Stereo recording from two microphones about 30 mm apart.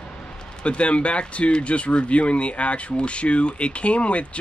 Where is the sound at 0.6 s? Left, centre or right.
Left.